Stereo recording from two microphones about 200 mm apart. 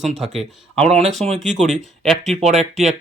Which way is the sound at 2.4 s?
35° right (ahead or behind).